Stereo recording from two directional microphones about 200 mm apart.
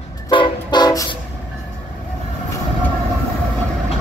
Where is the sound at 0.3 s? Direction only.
25° left (ahead or behind).